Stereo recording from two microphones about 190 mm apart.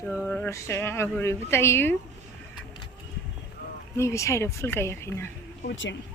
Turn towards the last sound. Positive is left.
turn(degrees=75)  # may be behind; listen again after turning